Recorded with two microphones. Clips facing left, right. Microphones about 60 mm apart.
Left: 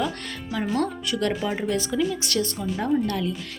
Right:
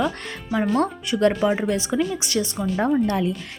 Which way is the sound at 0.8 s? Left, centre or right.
Right.